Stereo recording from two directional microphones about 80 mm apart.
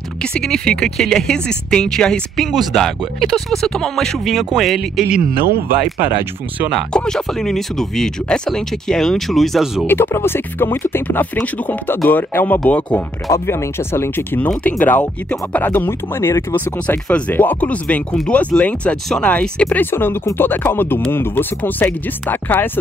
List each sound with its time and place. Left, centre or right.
0.2 s speech: centre
6.9 s speech: centre
9.8 s speech: left
13.3 s speech: left
15.7 s speech: left
17.1 s speech: left
19.8 s speech: left